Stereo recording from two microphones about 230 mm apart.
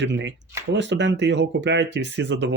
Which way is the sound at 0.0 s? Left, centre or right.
Right.